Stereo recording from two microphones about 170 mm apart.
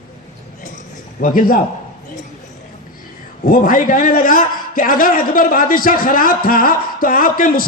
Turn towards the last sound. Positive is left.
turn(degrees=55)  # may be behind; listen again after turning